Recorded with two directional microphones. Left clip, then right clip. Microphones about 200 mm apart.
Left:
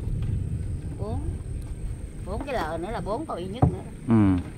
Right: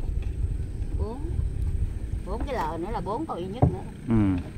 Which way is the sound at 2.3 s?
Centre (ahead or behind).